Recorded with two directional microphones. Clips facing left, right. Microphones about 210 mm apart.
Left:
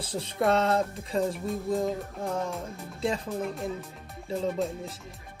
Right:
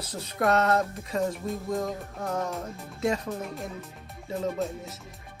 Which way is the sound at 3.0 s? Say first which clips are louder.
Right 2 dB; 30° left (ahead or behind).